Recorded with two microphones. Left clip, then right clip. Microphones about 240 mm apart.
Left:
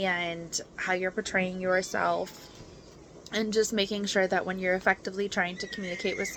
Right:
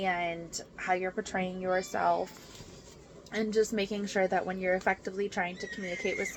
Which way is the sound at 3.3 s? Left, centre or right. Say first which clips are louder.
Left 2 dB; left.